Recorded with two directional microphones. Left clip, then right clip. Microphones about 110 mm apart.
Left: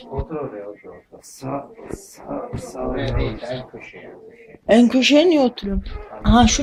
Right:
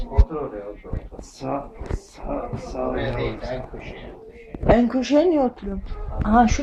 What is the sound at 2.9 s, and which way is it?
Speech, 25° left (ahead or behind).